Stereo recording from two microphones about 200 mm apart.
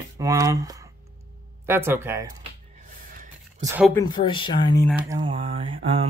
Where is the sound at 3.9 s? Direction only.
20° left (ahead or behind).